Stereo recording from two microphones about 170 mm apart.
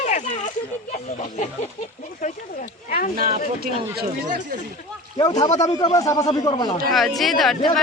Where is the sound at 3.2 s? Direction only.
60° right (ahead or behind).